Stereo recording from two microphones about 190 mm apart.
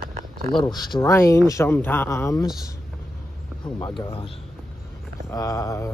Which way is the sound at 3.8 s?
25° left (ahead or behind).